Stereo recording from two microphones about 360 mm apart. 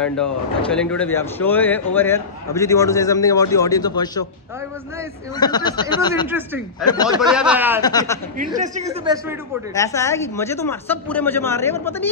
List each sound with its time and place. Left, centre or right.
0.2 s speech: centre
5.3 s speech: centre
6.2 s speech: centre
7.8 s speech: centre
8.4 s a man's voice: right
9.8 s speech: centre